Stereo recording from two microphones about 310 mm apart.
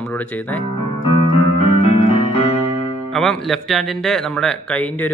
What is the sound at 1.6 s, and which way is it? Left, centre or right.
Keyboard, centre.